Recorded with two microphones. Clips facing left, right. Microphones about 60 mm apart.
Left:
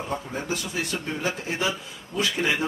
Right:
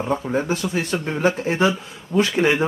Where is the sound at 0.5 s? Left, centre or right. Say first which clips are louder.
Right 6 dB; right.